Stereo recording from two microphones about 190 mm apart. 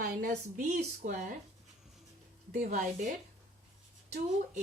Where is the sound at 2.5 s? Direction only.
40° right (ahead or behind).